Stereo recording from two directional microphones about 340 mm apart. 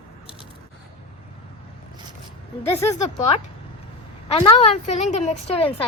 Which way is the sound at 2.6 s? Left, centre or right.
Centre.